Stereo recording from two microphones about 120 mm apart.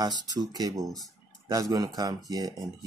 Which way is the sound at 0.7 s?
Centre (ahead or behind).